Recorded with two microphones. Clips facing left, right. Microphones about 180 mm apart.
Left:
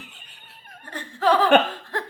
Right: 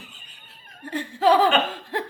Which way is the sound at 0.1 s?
65° left (ahead or behind).